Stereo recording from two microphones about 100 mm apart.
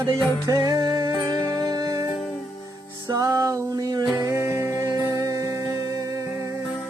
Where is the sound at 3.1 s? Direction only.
35° right (ahead or behind).